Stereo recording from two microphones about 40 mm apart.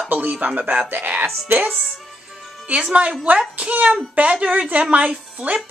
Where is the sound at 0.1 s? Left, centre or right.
Right.